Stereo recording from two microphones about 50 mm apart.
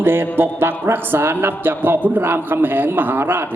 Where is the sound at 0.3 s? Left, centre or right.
Right.